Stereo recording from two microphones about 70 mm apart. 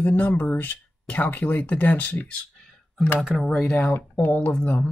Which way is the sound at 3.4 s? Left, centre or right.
Centre.